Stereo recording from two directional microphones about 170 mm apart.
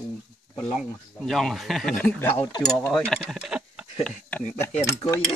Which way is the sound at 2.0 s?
10° left (ahead or behind).